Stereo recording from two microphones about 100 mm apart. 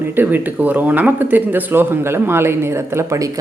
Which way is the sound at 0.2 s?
20° right (ahead or behind).